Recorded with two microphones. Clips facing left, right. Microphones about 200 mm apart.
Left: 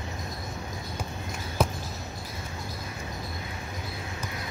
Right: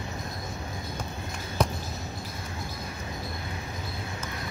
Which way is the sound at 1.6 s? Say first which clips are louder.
Even; 5° left (ahead or behind).